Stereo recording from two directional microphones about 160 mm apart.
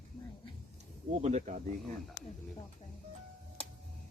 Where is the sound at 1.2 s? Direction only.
45° right (ahead or behind).